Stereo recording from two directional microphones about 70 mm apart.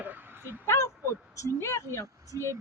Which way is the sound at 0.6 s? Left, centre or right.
Left.